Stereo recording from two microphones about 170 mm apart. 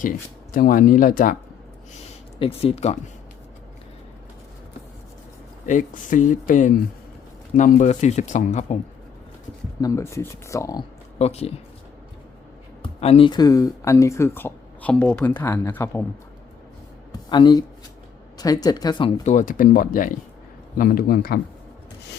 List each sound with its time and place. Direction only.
0.5 s speech: 55° left (ahead or behind)
2.4 s speech: 35° left (ahead or behind)
5.6 s speech: 50° left (ahead or behind)
9.8 s speech: 15° left (ahead or behind)
11.2 s speech: 40° left (ahead or behind)
12.8 s speech: 35° left (ahead or behind); by 16.0 s 15° left (ahead or behind)
17.1 s speech: 25° left (ahead or behind)
19.2 s speech: 45° left (ahead or behind)